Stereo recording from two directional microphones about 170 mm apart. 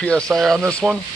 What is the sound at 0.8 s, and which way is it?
Speech, 10° right (ahead or behind).